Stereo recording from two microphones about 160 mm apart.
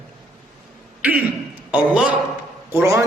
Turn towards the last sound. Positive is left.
turn(degrees=-15)  # may be behind; listen again after turning